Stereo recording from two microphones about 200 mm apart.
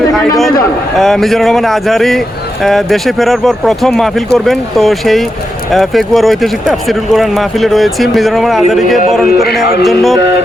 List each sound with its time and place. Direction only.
0.9 s speech: centre (ahead or behind)
9.8 s speech: centre (ahead or behind)